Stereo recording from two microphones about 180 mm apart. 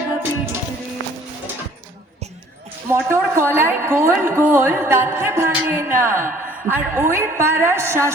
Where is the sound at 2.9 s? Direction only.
15° right (ahead or behind).